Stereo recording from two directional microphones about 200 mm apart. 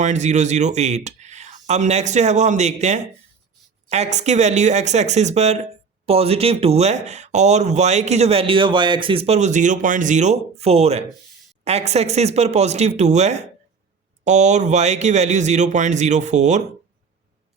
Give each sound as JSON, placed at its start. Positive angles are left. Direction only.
{"t": 0.0, "sound": "speech", "side_deg": -35}